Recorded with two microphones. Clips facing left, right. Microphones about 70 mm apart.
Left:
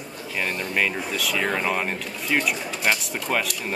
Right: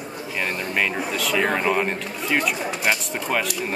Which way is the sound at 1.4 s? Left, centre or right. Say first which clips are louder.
Right 2 dB; centre.